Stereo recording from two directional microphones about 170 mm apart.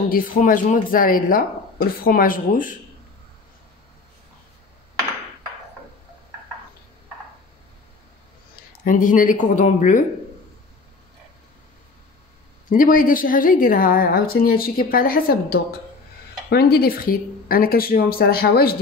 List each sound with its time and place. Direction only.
0.1 s a woman's voice: 55° left (ahead or behind)
8.8 s speech: 55° left (ahead or behind)
12.6 s a woman's voice: 50° left (ahead or behind)